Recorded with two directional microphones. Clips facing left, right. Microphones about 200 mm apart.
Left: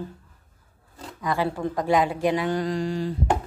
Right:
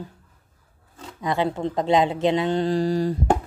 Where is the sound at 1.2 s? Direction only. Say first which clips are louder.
Right 2 dB; 20° right (ahead or behind); by 3.4 s 40° right (ahead or behind).